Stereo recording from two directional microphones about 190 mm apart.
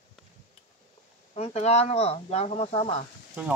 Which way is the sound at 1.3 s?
35° left (ahead or behind).